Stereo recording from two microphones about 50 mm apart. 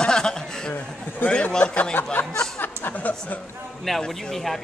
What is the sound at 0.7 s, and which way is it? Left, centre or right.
Speech, left.